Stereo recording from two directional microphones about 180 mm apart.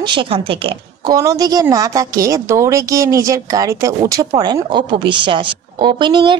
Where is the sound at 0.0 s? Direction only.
25° right (ahead or behind).